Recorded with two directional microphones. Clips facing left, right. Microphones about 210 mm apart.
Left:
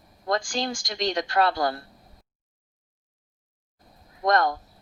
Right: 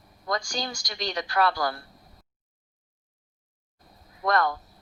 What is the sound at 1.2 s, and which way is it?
Speech, 25° left (ahead or behind).